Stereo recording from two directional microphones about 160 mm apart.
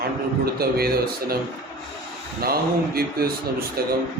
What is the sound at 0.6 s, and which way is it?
Speech, 75° right (ahead or behind).